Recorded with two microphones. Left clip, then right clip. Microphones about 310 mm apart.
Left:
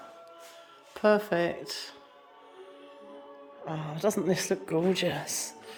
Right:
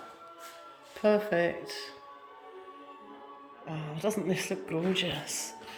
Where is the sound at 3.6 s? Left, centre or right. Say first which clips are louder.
Left 4 dB; centre.